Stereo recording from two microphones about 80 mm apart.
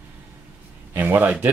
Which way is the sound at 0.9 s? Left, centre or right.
Right.